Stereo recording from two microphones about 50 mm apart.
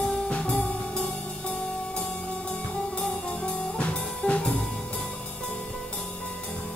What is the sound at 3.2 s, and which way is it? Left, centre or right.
Music, left.